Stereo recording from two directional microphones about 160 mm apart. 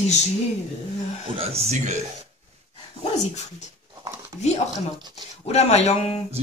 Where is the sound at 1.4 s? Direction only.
40° right (ahead or behind).